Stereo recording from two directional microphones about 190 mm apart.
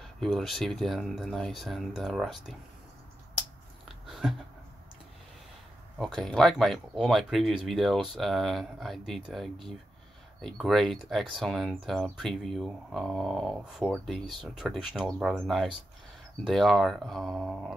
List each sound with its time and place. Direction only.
0.0 s speech: centre (ahead or behind)
4.1 s a sound: centre (ahead or behind)
5.9 s speech: centre (ahead or behind)